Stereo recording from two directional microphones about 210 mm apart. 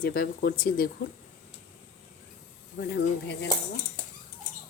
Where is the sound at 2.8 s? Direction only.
45° left (ahead or behind).